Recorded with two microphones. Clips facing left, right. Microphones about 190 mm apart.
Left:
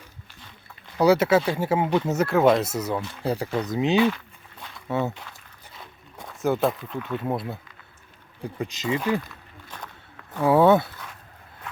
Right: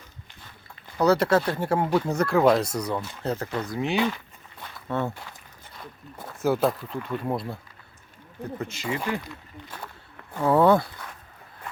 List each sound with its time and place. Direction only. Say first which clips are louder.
0.9 s speech: left 2 dB; 10° left (ahead or behind)
4.6 s a sound: left 2 dB; 5° left (ahead or behind)
5.7 s speech: right 3 dB; centre (ahead or behind)
8.5 s speech: left 4 dB; 15° left (ahead or behind)
9.0 s a sound: left 4 dB; 15° right (ahead or behind)
10.4 s speech: left 2 dB; 5° left (ahead or behind)